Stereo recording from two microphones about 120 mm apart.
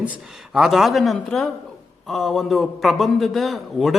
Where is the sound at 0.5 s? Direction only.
Centre (ahead or behind).